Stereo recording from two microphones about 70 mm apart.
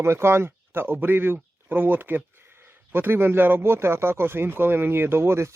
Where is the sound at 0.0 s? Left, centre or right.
Right.